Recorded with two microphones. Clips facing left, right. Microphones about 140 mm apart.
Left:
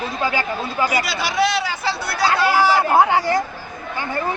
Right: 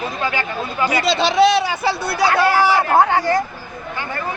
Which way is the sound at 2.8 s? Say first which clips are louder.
Right 1 dB; 10° left (ahead or behind).